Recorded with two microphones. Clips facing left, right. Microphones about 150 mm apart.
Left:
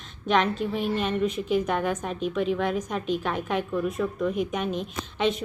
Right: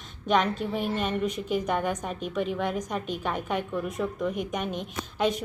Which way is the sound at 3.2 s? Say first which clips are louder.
Left 2 dB; 15° right (ahead or behind).